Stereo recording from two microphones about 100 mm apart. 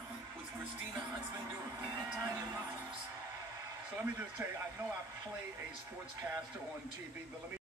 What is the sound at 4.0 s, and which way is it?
Speech, 20° right (ahead or behind).